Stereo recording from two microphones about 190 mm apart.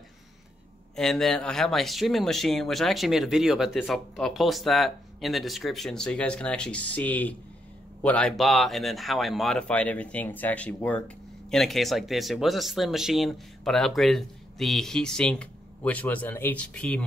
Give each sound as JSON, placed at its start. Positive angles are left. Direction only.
{"t": 0.9, "sound": "speech", "side_deg": 0}